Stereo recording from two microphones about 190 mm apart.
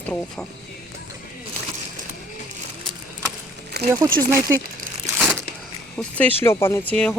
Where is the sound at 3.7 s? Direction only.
60° right (ahead or behind).